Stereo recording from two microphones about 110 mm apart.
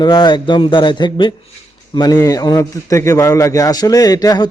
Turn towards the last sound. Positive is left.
turn(degrees=35)  # may be behind; listen again after turning